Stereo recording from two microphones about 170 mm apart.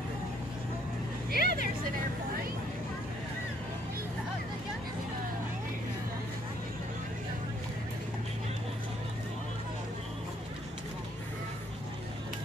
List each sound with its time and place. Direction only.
1.3 s vehicle: 65° right (ahead or behind)